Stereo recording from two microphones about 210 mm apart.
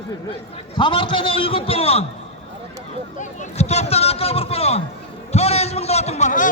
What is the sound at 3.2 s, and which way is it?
A man's voice, 35° left (ahead or behind).